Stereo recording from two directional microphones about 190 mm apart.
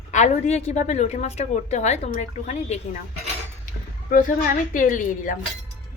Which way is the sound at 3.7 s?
45° left (ahead or behind).